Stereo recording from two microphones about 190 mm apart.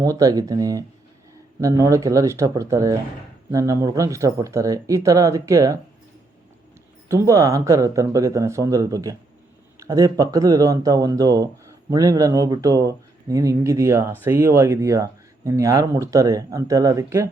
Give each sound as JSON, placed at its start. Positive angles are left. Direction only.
{"t": 0.0, "sound": "speech", "side_deg": -20}
{"t": 7.1, "sound": "speech", "side_deg": -15}